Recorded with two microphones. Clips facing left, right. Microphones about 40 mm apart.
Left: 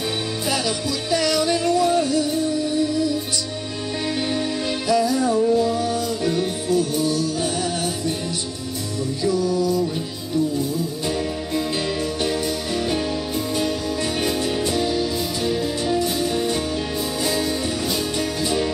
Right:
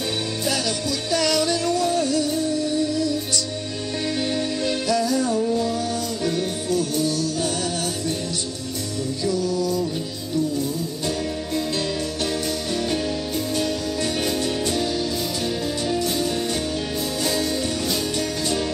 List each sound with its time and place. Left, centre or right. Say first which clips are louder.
1.1 s music: left 1 dB; centre
4.3 s music: even; centre
9.2 s music: left 3 dB; centre
14.2 s music: left 1 dB; centre